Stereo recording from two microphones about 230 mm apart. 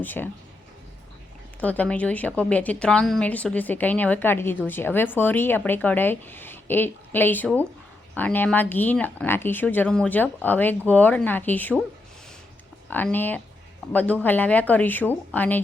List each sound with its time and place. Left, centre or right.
0.0 s speech: centre
1.6 s speech: centre
12.9 s speech: centre